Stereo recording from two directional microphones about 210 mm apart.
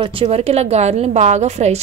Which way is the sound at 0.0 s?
25° right (ahead or behind).